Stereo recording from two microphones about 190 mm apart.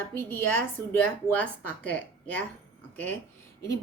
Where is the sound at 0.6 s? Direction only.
5° left (ahead or behind).